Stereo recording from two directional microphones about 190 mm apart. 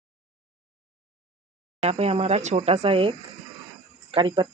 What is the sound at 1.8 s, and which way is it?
Speech, 35° right (ahead or behind).